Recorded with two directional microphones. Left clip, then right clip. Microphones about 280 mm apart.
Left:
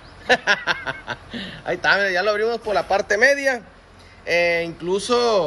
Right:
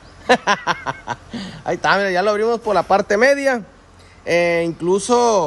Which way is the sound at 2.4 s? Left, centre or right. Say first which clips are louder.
Right 4 dB; right.